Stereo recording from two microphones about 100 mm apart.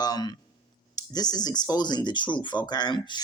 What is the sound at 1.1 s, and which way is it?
Speech, 40° left (ahead or behind).